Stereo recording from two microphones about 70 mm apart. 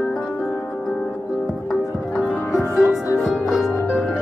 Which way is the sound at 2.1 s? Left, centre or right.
Centre.